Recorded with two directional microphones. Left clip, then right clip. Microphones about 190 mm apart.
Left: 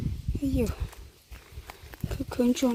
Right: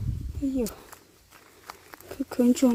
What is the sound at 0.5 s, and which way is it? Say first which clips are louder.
Speech: even; 5° right (ahead or behind).